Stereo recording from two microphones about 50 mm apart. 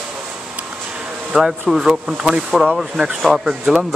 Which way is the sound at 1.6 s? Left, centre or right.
Centre.